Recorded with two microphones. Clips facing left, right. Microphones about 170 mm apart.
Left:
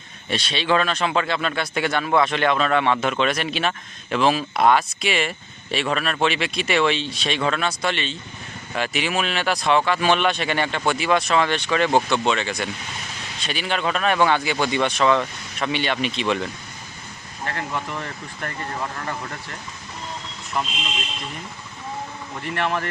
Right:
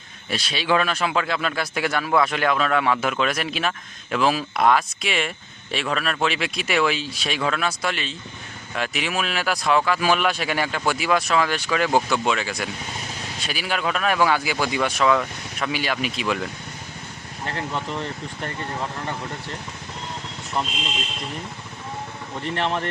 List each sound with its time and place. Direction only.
0.3 s speech: centre (ahead or behind)
17.5 s speech: 30° right (ahead or behind)
22.4 s speech: 25° right (ahead or behind)